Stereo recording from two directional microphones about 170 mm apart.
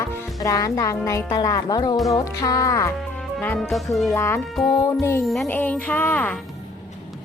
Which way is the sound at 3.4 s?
5° left (ahead or behind).